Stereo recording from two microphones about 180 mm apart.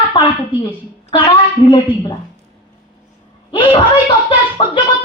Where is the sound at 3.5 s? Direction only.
30° left (ahead or behind).